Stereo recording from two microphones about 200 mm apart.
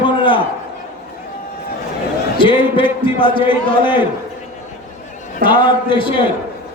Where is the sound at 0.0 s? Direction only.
25° left (ahead or behind).